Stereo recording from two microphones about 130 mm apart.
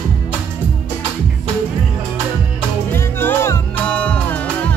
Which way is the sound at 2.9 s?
15° left (ahead or behind).